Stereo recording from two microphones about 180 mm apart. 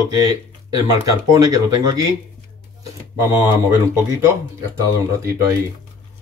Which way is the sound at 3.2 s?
15° right (ahead or behind).